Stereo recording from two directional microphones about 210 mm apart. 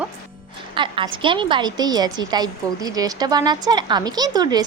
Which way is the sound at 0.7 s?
25° right (ahead or behind).